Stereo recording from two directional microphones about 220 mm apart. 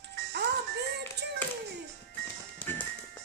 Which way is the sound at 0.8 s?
50° right (ahead or behind).